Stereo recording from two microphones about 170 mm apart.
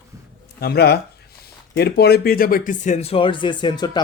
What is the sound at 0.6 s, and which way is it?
Speech, 70° left (ahead or behind).